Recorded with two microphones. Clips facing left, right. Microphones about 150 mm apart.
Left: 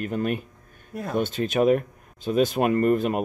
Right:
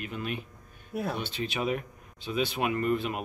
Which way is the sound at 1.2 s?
45° left (ahead or behind).